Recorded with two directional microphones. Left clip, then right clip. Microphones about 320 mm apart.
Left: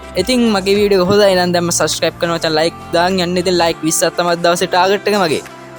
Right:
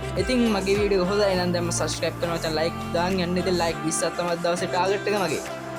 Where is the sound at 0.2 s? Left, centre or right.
Left.